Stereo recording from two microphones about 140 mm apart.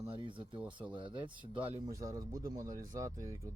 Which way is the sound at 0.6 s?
10° right (ahead or behind).